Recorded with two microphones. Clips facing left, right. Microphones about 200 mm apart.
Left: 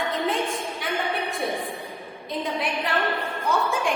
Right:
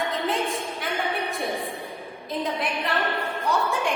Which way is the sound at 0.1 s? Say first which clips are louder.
Left 1 dB; centre (ahead or behind).